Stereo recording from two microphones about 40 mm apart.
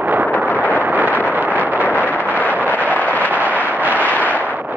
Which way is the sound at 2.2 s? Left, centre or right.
Left.